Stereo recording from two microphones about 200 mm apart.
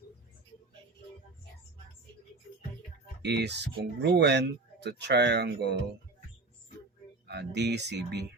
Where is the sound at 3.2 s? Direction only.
55° right (ahead or behind).